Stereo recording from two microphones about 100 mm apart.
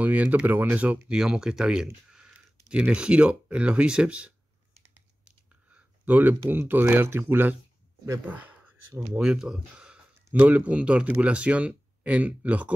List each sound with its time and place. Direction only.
0.0 s speech: 15° right (ahead or behind)
2.0 s a sound: 5° right (ahead or behind)
2.7 s speech: 10° right (ahead or behind)
9.2 s speech: 5° right (ahead or behind)